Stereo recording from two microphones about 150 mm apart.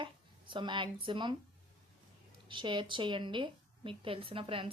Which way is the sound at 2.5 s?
30° right (ahead or behind).